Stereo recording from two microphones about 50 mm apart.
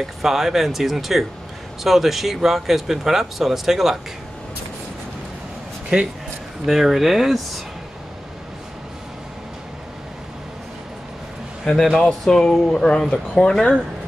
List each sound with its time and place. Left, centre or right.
0.0 s speech: centre
5.9 s speech: right
6.6 s speech: centre
11.6 s speech: centre